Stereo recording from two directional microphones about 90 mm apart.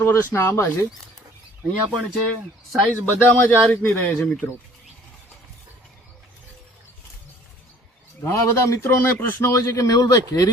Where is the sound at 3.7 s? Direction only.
20° left (ahead or behind).